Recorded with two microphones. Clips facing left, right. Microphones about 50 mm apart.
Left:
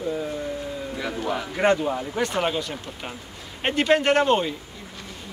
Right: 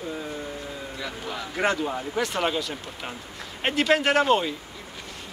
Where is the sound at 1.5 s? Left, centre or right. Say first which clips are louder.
Left 3 dB; centre.